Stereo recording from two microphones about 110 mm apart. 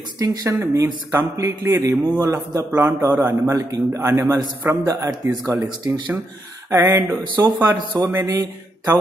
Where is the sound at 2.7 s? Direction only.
20° right (ahead or behind).